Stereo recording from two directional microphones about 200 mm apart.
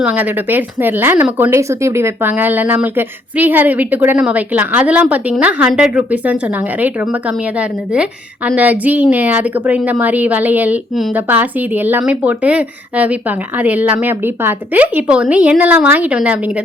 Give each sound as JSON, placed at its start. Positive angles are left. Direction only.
{"t": 0.0, "sound": "a woman's voice", "side_deg": -10}
{"t": 8.4, "sound": "a woman's voice", "side_deg": -10}